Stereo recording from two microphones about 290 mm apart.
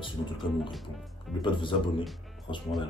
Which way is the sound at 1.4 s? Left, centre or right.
Centre.